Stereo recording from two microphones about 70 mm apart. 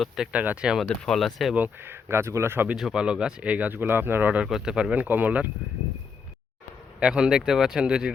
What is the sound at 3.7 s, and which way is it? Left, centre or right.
Speech, right.